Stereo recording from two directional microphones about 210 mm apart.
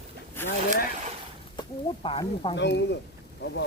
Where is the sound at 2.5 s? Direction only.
55° left (ahead or behind).